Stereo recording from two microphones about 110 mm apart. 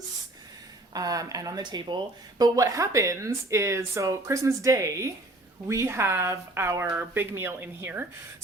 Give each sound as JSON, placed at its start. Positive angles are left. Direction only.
{"t": 0.9, "sound": "speech", "side_deg": -35}
{"t": 2.4, "sound": "speech", "side_deg": -30}